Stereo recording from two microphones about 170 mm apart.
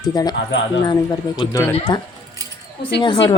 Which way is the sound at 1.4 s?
20° left (ahead or behind).